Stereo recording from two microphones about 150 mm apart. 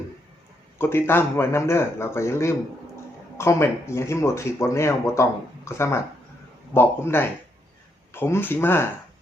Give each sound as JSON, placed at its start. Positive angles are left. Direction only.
{"t": 0.8, "sound": "speech", "side_deg": 15}